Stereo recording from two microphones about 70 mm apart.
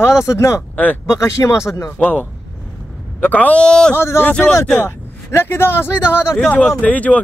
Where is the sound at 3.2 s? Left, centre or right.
Left.